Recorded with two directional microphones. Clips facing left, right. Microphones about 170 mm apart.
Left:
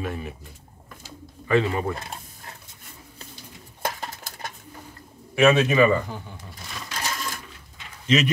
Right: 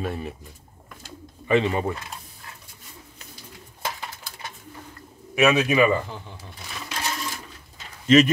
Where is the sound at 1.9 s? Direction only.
40° left (ahead or behind).